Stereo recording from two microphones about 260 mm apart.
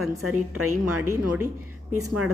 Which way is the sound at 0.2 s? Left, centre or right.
Right.